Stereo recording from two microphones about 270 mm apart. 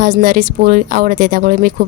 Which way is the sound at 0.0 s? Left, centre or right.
Right.